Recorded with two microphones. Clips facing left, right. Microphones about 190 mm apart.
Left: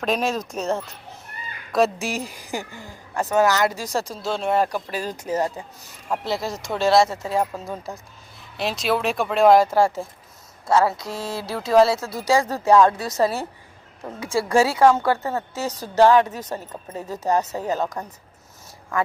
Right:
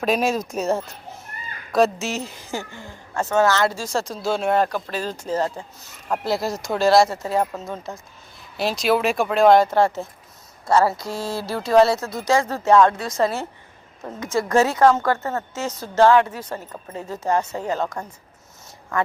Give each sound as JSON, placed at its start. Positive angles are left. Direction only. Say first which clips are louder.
{"t": 0.0, "sound": "speech", "louder": "right 2 dB", "side_deg": -5}
{"t": 2.0, "sound": "speech", "louder": "even", "side_deg": 15}
{"t": 4.1, "sound": "speech", "louder": "right 3 dB", "side_deg": -5}
{"t": 6.1, "sound": "speech", "louder": "right 2 dB", "side_deg": 0}